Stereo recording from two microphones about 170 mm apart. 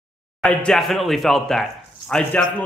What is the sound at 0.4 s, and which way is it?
Speech, 5° left (ahead or behind).